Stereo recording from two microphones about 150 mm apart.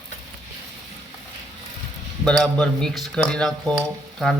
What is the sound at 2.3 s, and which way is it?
A man's voice, 5° left (ahead or behind).